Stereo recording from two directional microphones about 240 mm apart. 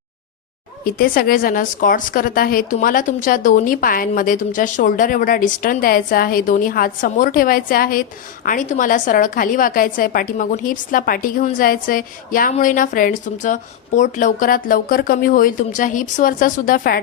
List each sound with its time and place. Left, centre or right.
0.9 s a woman's voice: left